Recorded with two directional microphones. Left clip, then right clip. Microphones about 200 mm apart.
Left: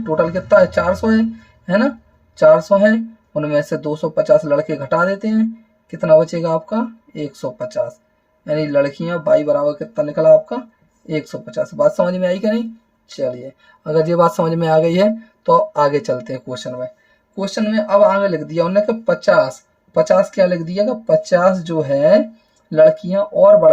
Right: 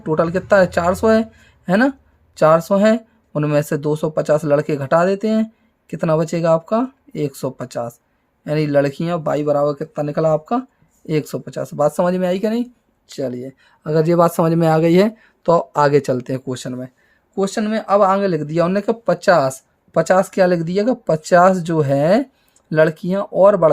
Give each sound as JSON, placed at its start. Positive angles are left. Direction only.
{"t": 0.2, "sound": "speech", "side_deg": -35}
{"t": 13.8, "sound": "speech", "side_deg": -25}